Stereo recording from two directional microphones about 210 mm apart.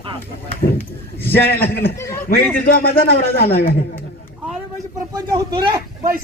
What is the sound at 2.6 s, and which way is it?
Speech, 45° left (ahead or behind).